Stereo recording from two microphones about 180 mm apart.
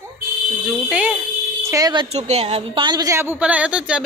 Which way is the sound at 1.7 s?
25° right (ahead or behind).